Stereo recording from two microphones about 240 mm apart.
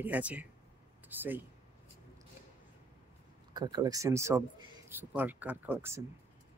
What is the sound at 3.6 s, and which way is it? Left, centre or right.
Speech, centre.